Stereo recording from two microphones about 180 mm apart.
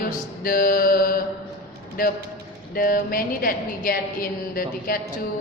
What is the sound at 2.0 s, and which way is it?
A woman's voice, 55° left (ahead or behind).